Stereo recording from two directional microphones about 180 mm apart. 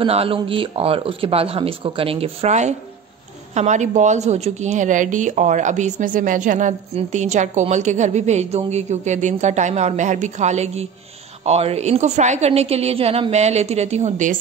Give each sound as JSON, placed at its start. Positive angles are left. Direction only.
{"t": 0.0, "sound": "a woman's voice", "side_deg": -30}